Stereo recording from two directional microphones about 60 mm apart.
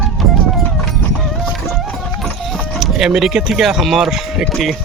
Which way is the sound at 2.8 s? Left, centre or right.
Centre.